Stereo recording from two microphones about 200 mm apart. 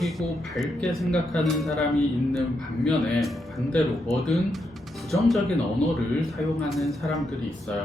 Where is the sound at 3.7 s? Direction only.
Centre (ahead or behind).